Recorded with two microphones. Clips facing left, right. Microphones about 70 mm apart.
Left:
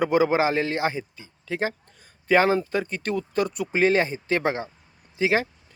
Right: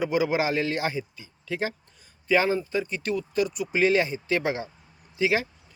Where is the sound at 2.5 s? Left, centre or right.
Left.